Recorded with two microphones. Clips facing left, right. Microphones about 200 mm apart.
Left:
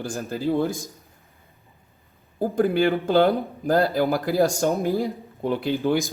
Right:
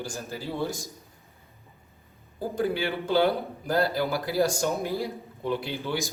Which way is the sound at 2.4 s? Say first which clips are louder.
Left 7 dB; 50° left (ahead or behind).